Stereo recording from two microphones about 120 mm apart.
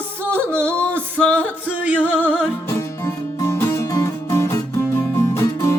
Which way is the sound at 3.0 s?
25° left (ahead or behind).